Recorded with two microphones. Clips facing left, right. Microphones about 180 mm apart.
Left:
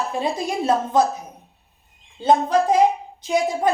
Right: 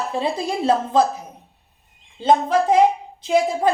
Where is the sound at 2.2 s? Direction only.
25° right (ahead or behind).